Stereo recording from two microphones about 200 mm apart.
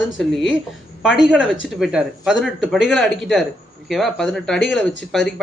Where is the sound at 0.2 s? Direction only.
Centre (ahead or behind).